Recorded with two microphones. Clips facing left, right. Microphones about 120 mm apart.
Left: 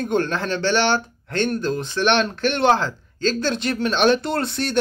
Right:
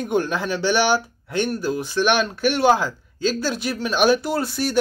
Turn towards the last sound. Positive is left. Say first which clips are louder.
# even
turn(degrees=-5)  # may be behind; listen again after turning